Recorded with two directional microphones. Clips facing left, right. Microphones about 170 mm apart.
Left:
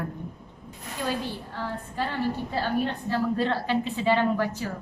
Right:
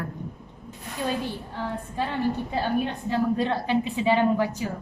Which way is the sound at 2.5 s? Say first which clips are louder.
Right 1 dB; 15° right (ahead or behind).